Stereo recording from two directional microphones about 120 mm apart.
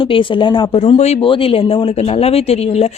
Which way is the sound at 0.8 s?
60° left (ahead or behind).